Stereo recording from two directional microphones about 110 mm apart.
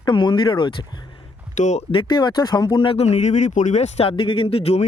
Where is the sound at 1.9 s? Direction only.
45° left (ahead or behind).